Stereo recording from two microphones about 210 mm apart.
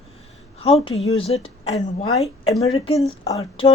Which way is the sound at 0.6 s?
30° left (ahead or behind).